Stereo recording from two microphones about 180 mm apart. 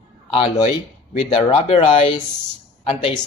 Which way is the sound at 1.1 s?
30° left (ahead or behind).